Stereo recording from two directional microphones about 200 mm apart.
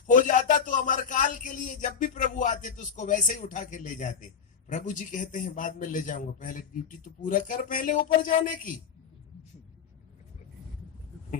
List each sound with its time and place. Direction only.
0.1 s a man's voice: 40° left (ahead or behind)